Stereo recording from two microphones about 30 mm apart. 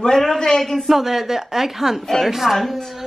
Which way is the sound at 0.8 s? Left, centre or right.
Centre.